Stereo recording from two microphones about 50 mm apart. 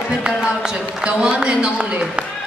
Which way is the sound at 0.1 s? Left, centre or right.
Centre.